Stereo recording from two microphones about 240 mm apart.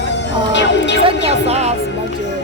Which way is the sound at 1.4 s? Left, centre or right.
Right.